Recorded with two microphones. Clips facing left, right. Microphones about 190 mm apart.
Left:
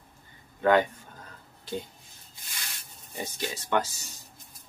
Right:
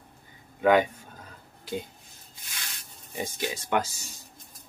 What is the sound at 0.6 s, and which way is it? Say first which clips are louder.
Speech: right 1 dB; 10° right (ahead or behind).